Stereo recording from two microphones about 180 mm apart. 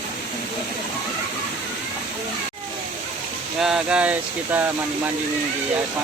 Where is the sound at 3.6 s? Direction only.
5° right (ahead or behind).